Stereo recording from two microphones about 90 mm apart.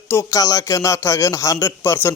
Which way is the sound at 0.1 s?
30° left (ahead or behind).